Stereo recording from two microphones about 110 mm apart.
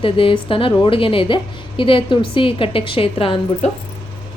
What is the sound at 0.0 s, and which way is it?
A woman's voice, 55° left (ahead or behind).